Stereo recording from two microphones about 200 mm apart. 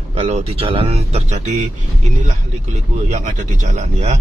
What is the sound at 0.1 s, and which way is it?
Speech, 30° right (ahead or behind).